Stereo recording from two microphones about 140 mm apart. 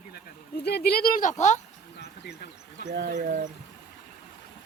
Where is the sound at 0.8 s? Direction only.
90° left; by 1.6 s 55° left (ahead or behind).